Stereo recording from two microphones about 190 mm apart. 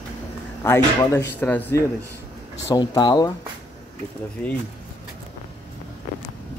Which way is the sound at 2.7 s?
25° left (ahead or behind).